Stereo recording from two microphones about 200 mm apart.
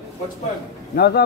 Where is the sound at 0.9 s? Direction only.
50° left (ahead or behind).